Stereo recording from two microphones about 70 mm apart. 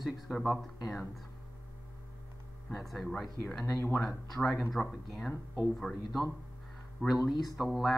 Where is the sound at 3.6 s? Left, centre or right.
Left.